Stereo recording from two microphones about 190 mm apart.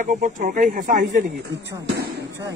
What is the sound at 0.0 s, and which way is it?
Speech, 40° right (ahead or behind).